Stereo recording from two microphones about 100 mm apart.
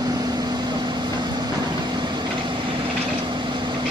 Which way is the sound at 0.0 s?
40° right (ahead or behind).